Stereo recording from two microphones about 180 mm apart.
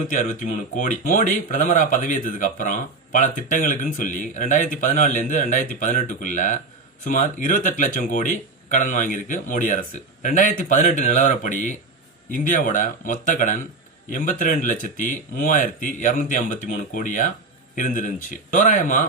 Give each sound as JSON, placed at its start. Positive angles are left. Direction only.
{"t": 0.1, "sound": "speech", "side_deg": 45}